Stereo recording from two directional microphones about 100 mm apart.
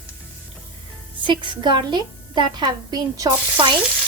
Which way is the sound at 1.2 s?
55° right (ahead or behind).